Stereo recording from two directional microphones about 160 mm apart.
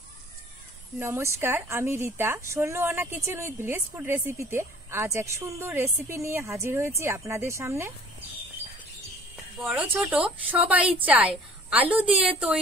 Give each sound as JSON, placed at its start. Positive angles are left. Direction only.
{"t": 0.9, "sound": "a woman's voice", "side_deg": -15}
{"t": 9.6, "sound": "a woman's voice", "side_deg": -10}